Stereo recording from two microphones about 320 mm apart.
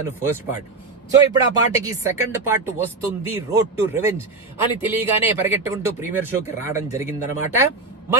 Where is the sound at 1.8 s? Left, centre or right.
Centre.